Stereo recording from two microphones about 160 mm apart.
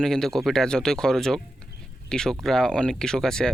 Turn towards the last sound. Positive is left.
turn(degrees=5)  # may be behind; listen again after turning